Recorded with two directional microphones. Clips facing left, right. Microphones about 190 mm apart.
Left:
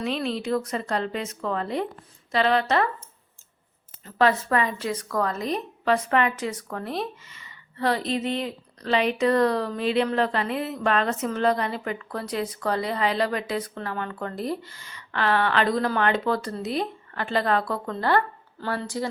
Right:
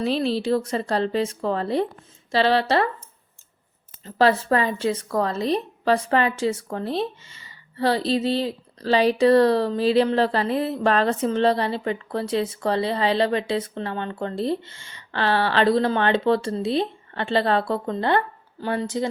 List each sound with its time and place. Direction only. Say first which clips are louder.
0.0 s a woman's voice: right 5 dB; 35° right (ahead or behind)
4.0 s speech: right 3 dB; 30° right (ahead or behind)